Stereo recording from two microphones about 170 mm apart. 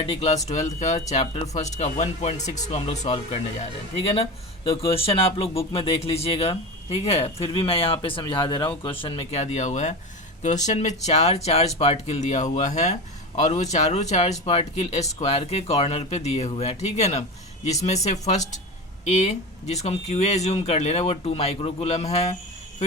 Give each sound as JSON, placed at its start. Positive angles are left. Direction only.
{"t": 0.0, "sound": "speech", "side_deg": 35}
{"t": 4.8, "sound": "speech", "side_deg": 35}
{"t": 9.4, "sound": "speech", "side_deg": 40}